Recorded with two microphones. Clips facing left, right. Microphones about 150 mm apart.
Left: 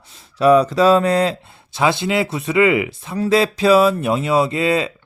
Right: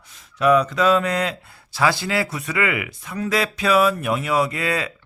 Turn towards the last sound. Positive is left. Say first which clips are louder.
# left 5 dB
turn(degrees=25)  # may be behind; listen again after turning